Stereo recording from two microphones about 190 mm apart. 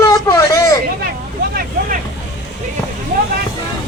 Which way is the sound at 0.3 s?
15° left (ahead or behind).